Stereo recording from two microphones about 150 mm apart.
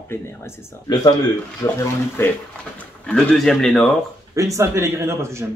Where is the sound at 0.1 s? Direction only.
15° left (ahead or behind).